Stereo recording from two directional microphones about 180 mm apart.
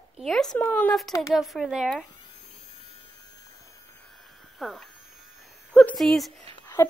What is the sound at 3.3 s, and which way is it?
Hum, 20° left (ahead or behind).